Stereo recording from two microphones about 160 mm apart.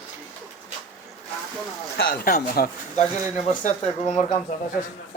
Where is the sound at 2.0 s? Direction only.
65° left (ahead or behind).